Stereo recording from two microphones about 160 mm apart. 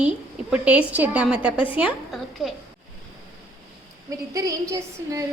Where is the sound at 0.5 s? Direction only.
5° right (ahead or behind).